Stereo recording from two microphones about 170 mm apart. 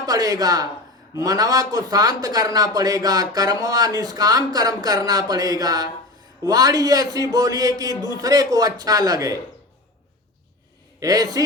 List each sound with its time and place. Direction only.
0.0 s a man's voice: 20° right (ahead or behind)
11.0 s a man's voice: 20° right (ahead or behind)